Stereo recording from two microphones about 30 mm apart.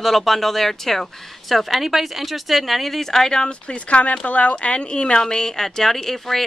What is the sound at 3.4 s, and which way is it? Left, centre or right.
Speech, left.